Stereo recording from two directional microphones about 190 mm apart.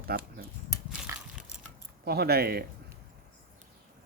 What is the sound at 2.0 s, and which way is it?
Speech, 55° right (ahead or behind).